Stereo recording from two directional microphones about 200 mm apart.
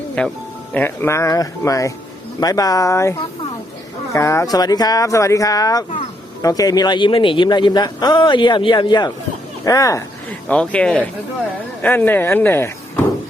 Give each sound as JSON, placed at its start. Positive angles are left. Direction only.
{"t": 0.2, "sound": "a man's voice", "side_deg": 5}
{"t": 10.5, "sound": "speech", "side_deg": 5}